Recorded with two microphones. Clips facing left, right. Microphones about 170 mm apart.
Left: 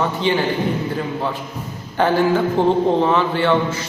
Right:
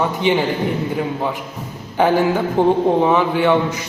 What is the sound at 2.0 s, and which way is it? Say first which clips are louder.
Speech: right 1 dB; 15° right (ahead or behind).